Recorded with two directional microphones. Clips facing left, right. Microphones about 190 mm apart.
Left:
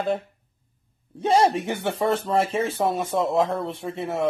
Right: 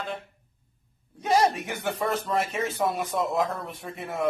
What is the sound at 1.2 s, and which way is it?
Speech, 30° left (ahead or behind).